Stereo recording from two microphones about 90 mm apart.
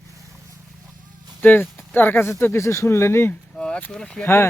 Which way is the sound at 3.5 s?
10° left (ahead or behind).